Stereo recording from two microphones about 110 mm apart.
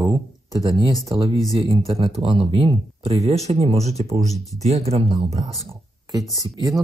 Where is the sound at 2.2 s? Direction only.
55° right (ahead or behind).